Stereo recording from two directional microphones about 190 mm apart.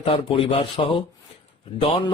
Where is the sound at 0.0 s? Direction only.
30° left (ahead or behind).